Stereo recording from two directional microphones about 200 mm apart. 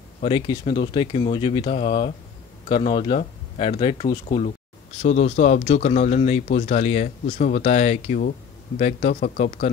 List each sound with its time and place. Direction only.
0.2 s speech: 25° left (ahead or behind)